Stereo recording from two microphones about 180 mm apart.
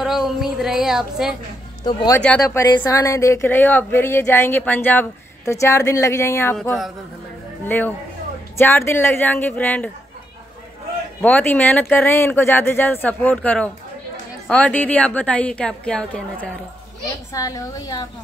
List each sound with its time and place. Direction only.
0.0 s a woman's voice: centre (ahead or behind)
1.9 s a woman's voice: 25° left (ahead or behind)
2.1 s speech: 5° left (ahead or behind)
2.4 s speech: 20° left (ahead or behind)
11.1 s speech: 10° left (ahead or behind)
17.3 s a woman's voice: 20° left (ahead or behind)